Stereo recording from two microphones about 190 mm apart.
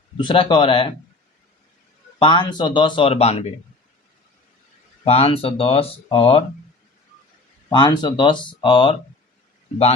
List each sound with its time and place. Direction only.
0.2 s speech: 25° left (ahead or behind)
2.1 s speech: 25° left (ahead or behind)
5.0 s speech: 30° left (ahead or behind)
7.7 s speech: 25° left (ahead or behind)